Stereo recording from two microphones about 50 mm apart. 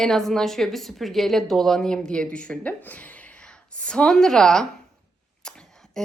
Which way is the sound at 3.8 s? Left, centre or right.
Left.